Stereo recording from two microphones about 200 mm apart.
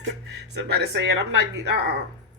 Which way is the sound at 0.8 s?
60° right (ahead or behind).